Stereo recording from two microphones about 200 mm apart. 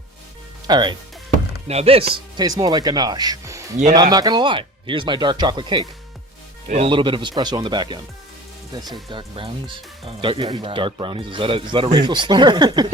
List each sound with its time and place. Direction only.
0.7 s speech: 20° right (ahead or behind)